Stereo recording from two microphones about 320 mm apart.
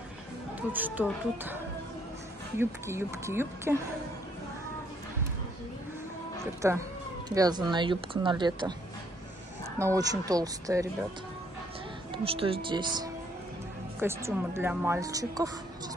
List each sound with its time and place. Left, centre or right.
0.6 s speech: centre
2.6 s speech: centre
6.4 s speech: centre
9.8 s speech: centre
12.1 s speech: centre